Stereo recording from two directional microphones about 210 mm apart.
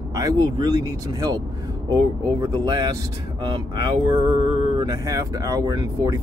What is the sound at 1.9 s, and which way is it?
Speech, 20° right (ahead or behind).